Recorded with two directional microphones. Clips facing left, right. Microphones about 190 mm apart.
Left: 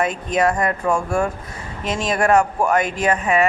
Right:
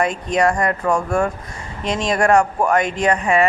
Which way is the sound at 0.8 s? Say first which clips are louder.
Right 1 dB; 10° left (ahead or behind).